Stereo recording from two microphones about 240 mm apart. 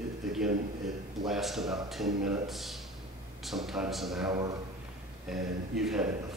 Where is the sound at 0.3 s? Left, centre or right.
Centre.